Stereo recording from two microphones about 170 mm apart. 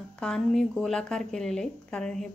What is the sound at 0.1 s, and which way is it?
Speech, 5° left (ahead or behind).